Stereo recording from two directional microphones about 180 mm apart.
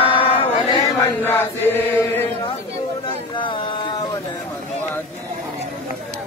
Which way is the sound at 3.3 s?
25° left (ahead or behind).